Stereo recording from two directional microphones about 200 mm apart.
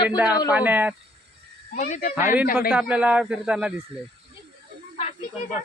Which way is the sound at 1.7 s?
40° left (ahead or behind).